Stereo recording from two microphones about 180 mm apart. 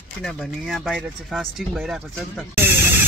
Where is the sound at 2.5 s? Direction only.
10° right (ahead or behind).